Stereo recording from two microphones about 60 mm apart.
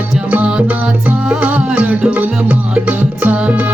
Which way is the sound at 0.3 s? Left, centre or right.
Right.